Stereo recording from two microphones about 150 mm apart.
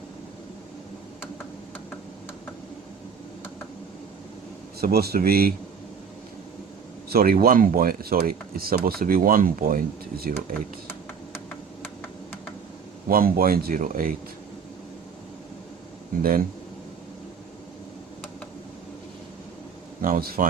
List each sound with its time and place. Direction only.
4.8 s speech: 90° right
7.1 s speech: 85° right
11.8 s a sound: 10° left (ahead or behind)
13.1 s speech: 75° right (ahead or behind)
20.0 s speech: 70° right (ahead or behind)